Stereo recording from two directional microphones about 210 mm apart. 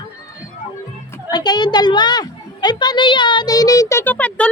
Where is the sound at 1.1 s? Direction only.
20° left (ahead or behind).